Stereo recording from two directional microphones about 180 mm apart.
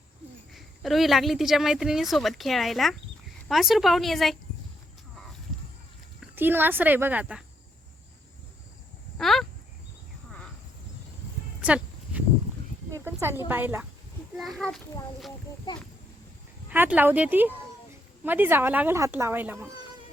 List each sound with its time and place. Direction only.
0.5 s a woman's voice: centre (ahead or behind)
6.3 s speech: 10° right (ahead or behind)
9.1 s a sound: centre (ahead or behind)
11.6 s a sound: 5° right (ahead or behind)
13.5 s speech: 10° right (ahead or behind)
14.3 s a woman's voice: centre (ahead or behind)
16.6 s speech: 10° right (ahead or behind)